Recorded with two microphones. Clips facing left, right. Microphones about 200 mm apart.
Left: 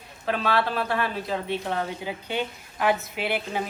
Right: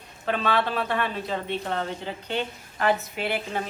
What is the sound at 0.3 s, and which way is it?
Speech, 5° left (ahead or behind).